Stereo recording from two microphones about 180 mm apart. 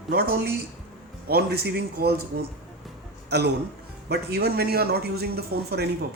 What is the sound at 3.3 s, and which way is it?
A man's voice, 65° right (ahead or behind).